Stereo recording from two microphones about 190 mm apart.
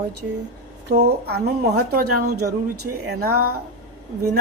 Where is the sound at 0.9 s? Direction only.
55° right (ahead or behind).